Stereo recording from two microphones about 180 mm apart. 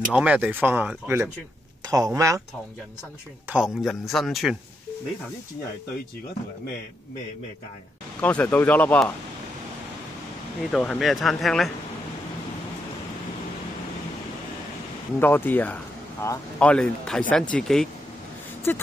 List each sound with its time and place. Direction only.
0.1 s speech: 5° right (ahead or behind)
3.4 s a man's voice: 5° right (ahead or behind)
8.2 s speech: 10° left (ahead or behind)
10.7 s a man's voice: 5° left (ahead or behind)
15.1 s a man's voice: 10° left (ahead or behind)